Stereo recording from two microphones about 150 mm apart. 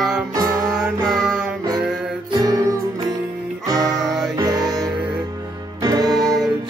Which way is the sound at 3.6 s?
20° right (ahead or behind).